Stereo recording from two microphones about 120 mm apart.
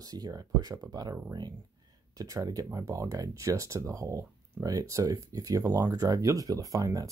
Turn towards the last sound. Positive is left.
turn(degrees=-30)  # may be behind; listen again after turning